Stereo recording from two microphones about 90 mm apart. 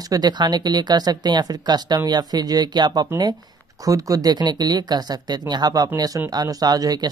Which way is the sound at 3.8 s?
40° right (ahead or behind).